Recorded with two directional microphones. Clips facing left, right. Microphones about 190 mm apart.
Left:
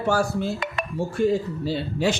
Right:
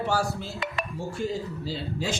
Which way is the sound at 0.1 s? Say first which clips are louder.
Left 5 dB; 55° left (ahead or behind).